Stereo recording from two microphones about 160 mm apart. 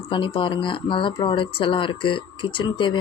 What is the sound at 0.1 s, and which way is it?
Speech, 30° left (ahead or behind).